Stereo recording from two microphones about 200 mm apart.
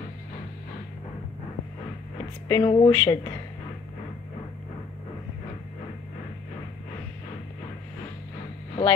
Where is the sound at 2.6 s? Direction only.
25° left (ahead or behind).